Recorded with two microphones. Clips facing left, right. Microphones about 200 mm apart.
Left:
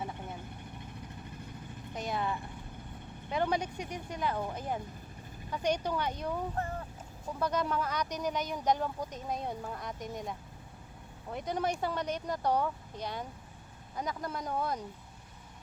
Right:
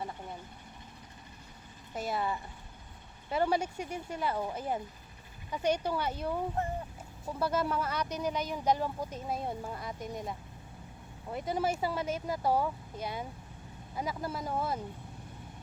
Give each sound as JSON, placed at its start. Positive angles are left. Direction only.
{"t": 2.0, "sound": "speech", "side_deg": -5}
{"t": 7.3, "sound": "speech", "side_deg": -5}